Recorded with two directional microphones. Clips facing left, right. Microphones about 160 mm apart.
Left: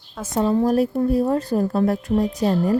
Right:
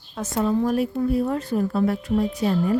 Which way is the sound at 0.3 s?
35° left (ahead or behind).